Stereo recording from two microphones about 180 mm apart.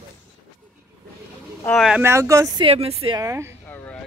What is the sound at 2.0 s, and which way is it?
Speech, 15° right (ahead or behind).